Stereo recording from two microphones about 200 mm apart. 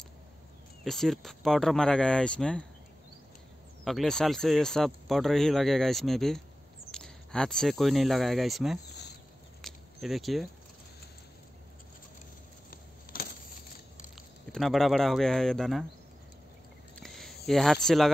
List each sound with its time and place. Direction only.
0.8 s speech: centre (ahead or behind)
3.8 s speech: centre (ahead or behind)
9.6 s a sound: centre (ahead or behind)
14.5 s speech: centre (ahead or behind)
16.9 s a sound: centre (ahead or behind)
17.5 s speech: centre (ahead or behind)